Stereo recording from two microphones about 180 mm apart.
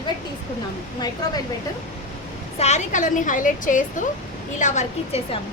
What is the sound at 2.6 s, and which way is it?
A woman's voice, 40° left (ahead or behind).